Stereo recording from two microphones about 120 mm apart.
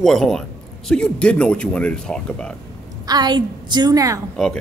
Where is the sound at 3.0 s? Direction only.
35° right (ahead or behind).